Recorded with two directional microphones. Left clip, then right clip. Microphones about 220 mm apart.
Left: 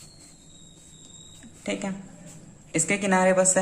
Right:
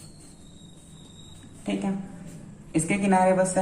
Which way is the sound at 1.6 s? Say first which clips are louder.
Even; 45° left (ahead or behind).